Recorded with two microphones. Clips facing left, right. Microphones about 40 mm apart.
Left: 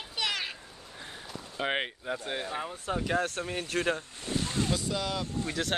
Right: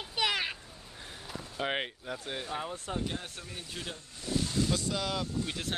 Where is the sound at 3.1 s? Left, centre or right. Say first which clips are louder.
Left 11 dB; left.